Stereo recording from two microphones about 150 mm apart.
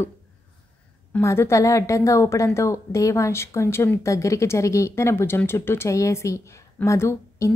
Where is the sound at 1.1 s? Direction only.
15° left (ahead or behind).